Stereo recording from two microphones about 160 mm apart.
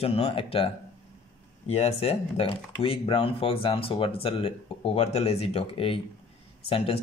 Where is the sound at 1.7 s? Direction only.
40° left (ahead or behind).